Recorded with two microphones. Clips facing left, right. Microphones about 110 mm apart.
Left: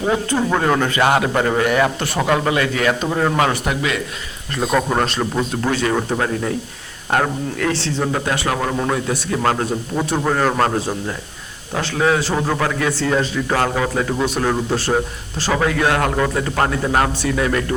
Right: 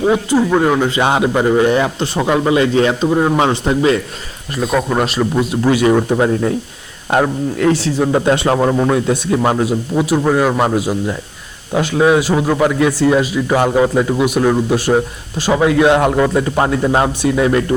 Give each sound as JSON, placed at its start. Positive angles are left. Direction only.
{"t": 0.0, "sound": "a man's voice", "side_deg": -15}
{"t": 4.9, "sound": "a man's voice", "side_deg": -5}
{"t": 5.9, "sound": "a man's voice", "side_deg": -15}
{"t": 8.1, "sound": "a man's voice", "side_deg": -25}